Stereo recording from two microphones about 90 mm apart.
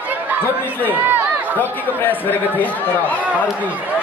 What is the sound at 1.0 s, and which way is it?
Speech, 20° right (ahead or behind).